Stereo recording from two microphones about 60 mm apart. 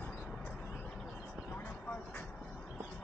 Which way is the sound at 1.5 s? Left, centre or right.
Left.